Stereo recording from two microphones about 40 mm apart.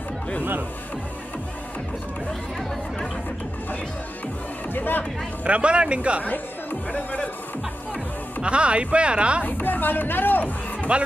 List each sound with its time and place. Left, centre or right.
4.7 s speech: left
5.4 s speech: right
6.2 s speech: left
8.4 s speech: right
9.4 s speech: left